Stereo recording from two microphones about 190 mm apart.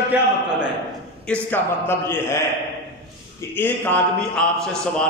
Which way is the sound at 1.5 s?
10° left (ahead or behind).